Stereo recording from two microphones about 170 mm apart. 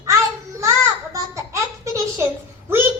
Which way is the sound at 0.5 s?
15° right (ahead or behind).